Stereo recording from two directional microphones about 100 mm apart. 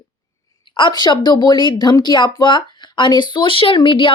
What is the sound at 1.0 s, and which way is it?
Speech, 50° left (ahead or behind).